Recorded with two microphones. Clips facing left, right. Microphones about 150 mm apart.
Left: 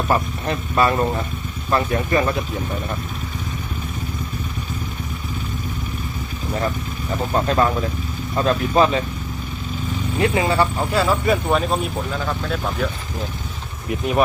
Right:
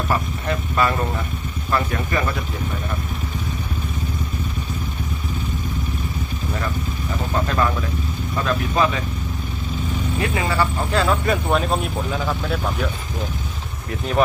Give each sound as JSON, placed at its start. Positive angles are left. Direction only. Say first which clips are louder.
{"t": 0.1, "sound": "speech", "louder": "left 3 dB", "side_deg": 30}
{"t": 7.3, "sound": "speech", "louder": "left 3 dB", "side_deg": 35}
{"t": 10.2, "sound": "speech", "louder": "left 4 dB", "side_deg": 30}
{"t": 10.9, "sound": "speech", "louder": "left 1 dB", "side_deg": 5}